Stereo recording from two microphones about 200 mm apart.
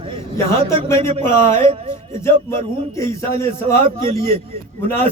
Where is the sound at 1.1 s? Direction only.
35° right (ahead or behind).